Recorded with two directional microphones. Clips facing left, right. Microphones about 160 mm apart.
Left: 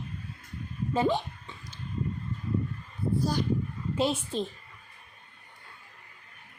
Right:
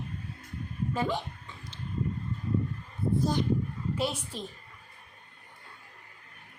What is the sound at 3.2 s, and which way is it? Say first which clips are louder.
Speech: right 1 dB; 20° right (ahead or behind).